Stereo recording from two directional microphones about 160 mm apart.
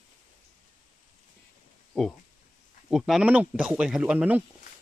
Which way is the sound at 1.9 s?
Centre (ahead or behind).